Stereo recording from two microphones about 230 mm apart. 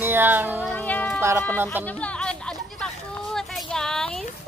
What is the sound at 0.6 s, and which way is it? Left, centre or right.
Music, centre.